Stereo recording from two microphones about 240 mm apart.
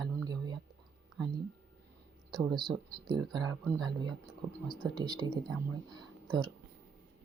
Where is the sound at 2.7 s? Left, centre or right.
Centre.